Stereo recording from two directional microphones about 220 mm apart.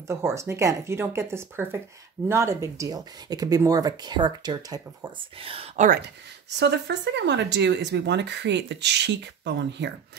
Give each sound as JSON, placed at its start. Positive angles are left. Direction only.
{"t": 0.1, "sound": "speech", "side_deg": -10}
{"t": 6.6, "sound": "speech", "side_deg": -50}